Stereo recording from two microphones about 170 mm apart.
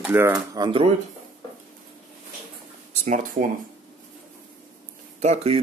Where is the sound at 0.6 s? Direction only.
30° right (ahead or behind).